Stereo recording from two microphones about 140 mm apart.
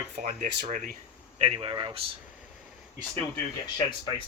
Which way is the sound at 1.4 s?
40° right (ahead or behind).